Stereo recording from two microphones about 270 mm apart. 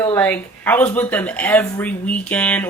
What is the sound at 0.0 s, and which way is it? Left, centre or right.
Speech, centre.